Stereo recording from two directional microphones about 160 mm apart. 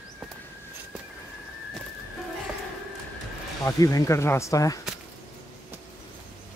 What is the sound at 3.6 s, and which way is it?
Speech, 20° left (ahead or behind).